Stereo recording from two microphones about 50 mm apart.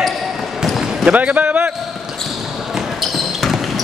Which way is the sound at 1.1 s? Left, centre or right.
Right.